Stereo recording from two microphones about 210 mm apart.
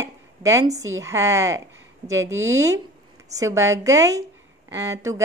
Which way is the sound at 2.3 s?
65° right (ahead or behind).